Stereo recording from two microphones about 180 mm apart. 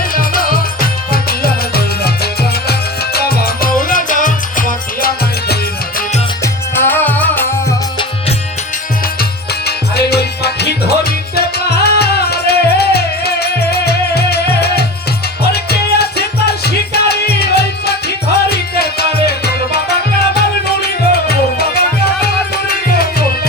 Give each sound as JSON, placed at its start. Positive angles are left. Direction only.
{"t": 0.1, "sound": "music", "side_deg": 50}
{"t": 6.4, "sound": "music", "side_deg": 10}
{"t": 9.6, "sound": "music", "side_deg": 60}